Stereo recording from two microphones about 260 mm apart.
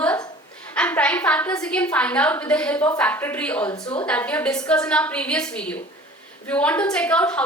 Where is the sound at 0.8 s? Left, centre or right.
Centre.